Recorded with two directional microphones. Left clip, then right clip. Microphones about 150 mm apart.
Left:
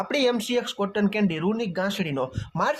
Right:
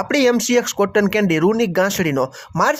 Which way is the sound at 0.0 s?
35° right (ahead or behind).